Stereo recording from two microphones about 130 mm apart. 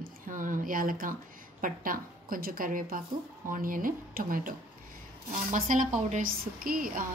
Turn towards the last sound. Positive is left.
turn(degrees=-90)